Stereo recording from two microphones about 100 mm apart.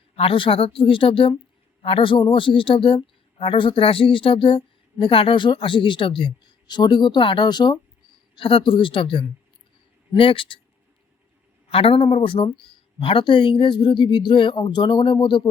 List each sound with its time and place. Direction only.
0.2 s a man's voice: 65° left (ahead or behind); by 7.8 s 50° left (ahead or behind)
8.4 s a man's voice: 60° left (ahead or behind)
11.7 s a man's voice: 70° left (ahead or behind)
12.0 s a man's voice: 60° left (ahead or behind)